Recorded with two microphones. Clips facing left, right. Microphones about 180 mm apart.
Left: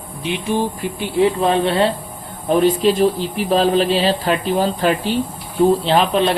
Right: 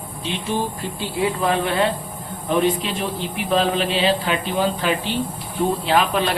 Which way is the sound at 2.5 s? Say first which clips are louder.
Left 6 dB; 40° left (ahead or behind).